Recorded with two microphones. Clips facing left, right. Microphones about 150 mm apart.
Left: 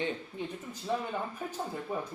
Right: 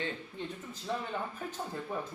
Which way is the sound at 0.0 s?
10° left (ahead or behind).